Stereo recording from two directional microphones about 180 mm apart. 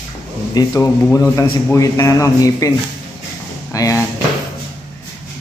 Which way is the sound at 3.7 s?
20° left (ahead or behind).